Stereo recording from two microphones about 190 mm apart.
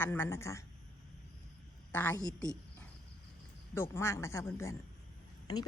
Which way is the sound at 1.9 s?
10° left (ahead or behind).